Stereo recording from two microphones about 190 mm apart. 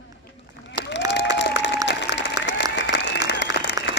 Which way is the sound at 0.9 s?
65° left (ahead or behind).